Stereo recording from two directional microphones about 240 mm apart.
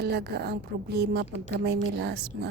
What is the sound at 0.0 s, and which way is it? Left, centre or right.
A woman's voice, right.